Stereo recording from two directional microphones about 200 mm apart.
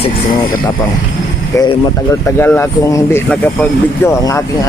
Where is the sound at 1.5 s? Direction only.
15° left (ahead or behind).